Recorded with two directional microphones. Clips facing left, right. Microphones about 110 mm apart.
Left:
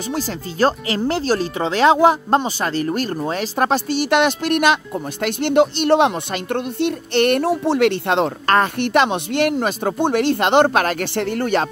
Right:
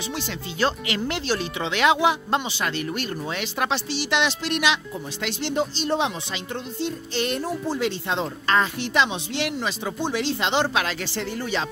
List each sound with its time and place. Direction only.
0.1 s speech: 40° left (ahead or behind)
5.2 s a woman's voice: 60° left (ahead or behind)